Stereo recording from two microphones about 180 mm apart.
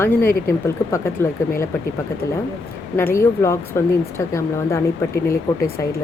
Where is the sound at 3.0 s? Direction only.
15° left (ahead or behind).